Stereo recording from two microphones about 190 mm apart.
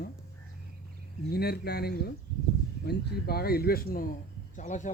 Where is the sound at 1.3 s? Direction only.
55° left (ahead or behind).